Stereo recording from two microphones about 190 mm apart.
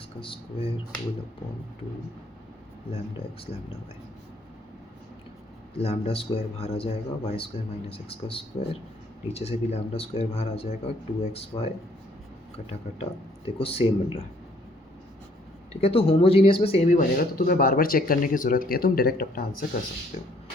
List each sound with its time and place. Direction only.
0.2 s speech: 30° left (ahead or behind)
2.9 s speech: 30° left (ahead or behind)
5.7 s speech: 30° left (ahead or behind)
13.0 s speech: 30° left (ahead or behind)
15.7 s speech: 30° left (ahead or behind); by 19.6 s 50° left (ahead or behind)